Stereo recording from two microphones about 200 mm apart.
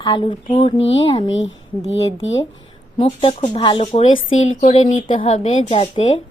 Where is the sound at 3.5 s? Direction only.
25° left (ahead or behind).